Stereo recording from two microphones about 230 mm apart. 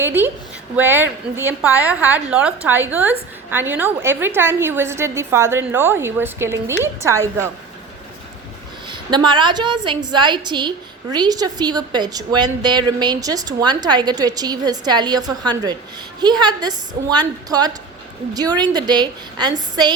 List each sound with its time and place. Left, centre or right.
0.0 s a woman's voice: centre
8.9 s a woman's voice: centre